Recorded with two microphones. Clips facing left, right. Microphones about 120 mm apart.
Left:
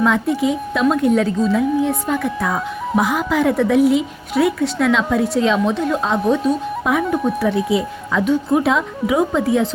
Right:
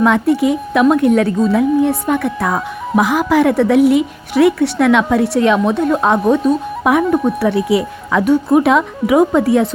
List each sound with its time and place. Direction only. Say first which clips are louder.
0.0 s a woman's voice: right 4 dB; 65° right (ahead or behind)